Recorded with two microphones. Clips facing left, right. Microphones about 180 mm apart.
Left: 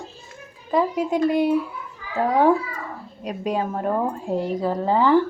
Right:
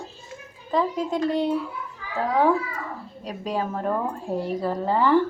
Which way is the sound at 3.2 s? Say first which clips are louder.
Left 3 dB; 20° left (ahead or behind).